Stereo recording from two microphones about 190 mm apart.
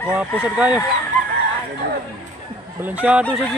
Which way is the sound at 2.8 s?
10° right (ahead or behind).